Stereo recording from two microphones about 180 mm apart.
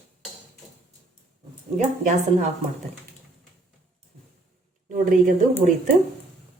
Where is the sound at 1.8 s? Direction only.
40° right (ahead or behind).